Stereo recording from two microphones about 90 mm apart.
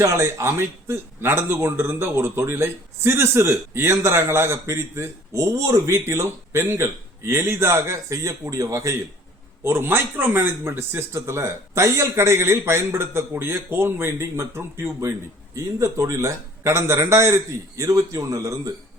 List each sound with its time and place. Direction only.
0.0 s a man's voice: 35° right (ahead or behind)
9.6 s a man's voice: 25° right (ahead or behind)